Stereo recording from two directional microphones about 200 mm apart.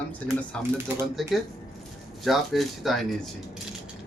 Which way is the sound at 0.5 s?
5° left (ahead or behind).